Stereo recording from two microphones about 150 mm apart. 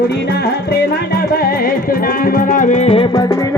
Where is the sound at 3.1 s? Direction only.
25° left (ahead or behind).